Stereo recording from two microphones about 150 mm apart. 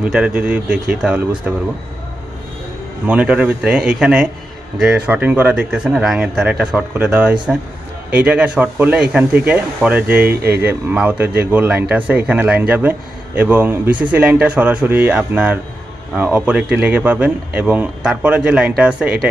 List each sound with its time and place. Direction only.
0.0 s a man's voice: 5° right (ahead or behind)
3.1 s a man's voice: 10° right (ahead or behind)
10.2 s speech: 90° right
10.6 s a man's voice: 10° right (ahead or behind)